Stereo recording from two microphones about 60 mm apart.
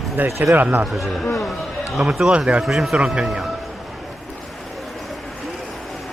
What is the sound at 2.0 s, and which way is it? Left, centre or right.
Speech, centre.